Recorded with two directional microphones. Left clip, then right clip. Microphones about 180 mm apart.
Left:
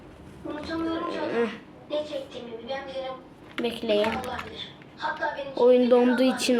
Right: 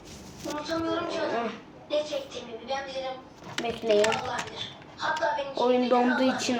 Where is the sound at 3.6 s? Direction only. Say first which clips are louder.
Left 1 dB; 50° left (ahead or behind).